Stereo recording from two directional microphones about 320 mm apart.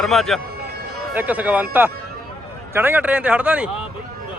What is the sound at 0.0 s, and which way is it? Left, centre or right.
Speech, centre.